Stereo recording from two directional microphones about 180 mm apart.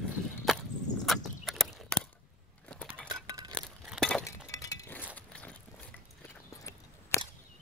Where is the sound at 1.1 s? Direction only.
Centre (ahead or behind).